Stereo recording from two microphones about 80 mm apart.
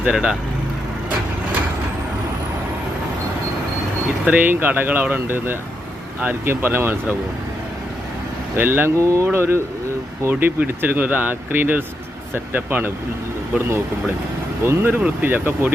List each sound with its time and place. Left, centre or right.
0.0 s speech: centre
4.3 s speech: right
8.5 s speech: right
9.0 s speech: right
14.6 s speech: right